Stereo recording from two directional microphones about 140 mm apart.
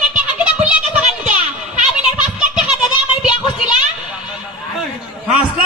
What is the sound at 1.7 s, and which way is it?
Children playing, 5° right (ahead or behind).